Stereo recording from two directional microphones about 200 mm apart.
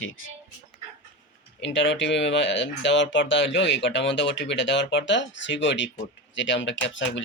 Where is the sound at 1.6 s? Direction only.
65° left (ahead or behind).